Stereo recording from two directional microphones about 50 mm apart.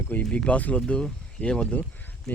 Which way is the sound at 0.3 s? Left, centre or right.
Left.